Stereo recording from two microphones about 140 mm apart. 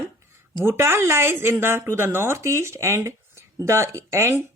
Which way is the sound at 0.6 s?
20° right (ahead or behind).